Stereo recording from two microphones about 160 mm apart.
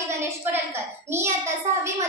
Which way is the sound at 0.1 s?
15° right (ahead or behind).